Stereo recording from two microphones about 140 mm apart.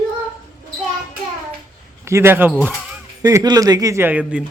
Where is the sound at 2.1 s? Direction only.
20° right (ahead or behind).